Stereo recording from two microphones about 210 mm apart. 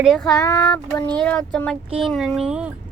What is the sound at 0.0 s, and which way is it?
Speech, centre (ahead or behind).